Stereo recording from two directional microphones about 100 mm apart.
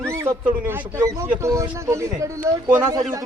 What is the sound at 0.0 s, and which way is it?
Speech, 30° right (ahead or behind).